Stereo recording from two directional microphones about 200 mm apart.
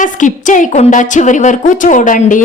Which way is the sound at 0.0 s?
40° left (ahead or behind).